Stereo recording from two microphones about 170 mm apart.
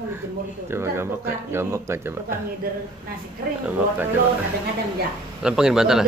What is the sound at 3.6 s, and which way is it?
Speech, 10° right (ahead or behind).